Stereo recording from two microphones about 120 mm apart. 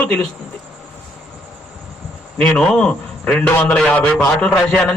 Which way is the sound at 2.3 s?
5° left (ahead or behind).